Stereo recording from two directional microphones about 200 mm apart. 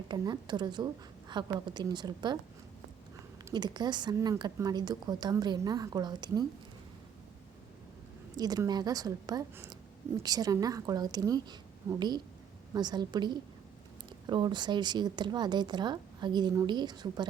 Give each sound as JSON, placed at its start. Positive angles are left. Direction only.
{"t": 0.1, "sound": "speech", "side_deg": -20}
{"t": 3.5, "sound": "speech", "side_deg": -20}
{"t": 8.4, "sound": "speech", "side_deg": -20}